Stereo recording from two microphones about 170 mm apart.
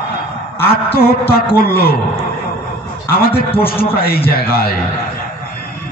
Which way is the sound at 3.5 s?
35° left (ahead or behind).